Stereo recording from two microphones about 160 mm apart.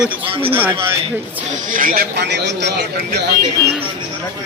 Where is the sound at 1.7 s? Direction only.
60° right (ahead or behind); by 2.9 s 90° right.